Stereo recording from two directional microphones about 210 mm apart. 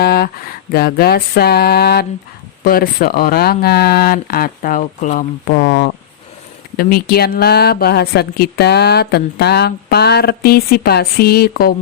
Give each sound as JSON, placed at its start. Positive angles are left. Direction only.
{"t": 0.0, "sound": "a woman's voice", "side_deg": 50}